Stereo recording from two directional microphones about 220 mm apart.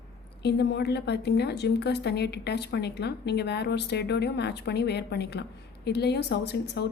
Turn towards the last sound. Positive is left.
turn(degrees=50)  # may be behind; listen again after turning